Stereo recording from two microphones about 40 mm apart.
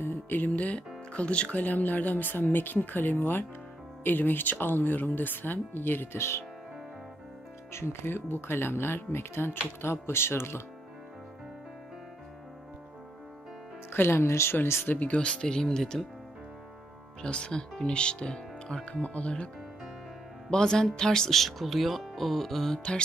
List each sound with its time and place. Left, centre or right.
0.6 s speech: left
1.6 s speech: left
3.2 s speech: left
4.0 s speech: left
7.7 s speech: left
13.9 s speech: left
15.1 s speech: left
15.4 s speech: centre
17.2 s speech: left
19.0 s speech: left
20.4 s speech: centre
21.4 s speech: centre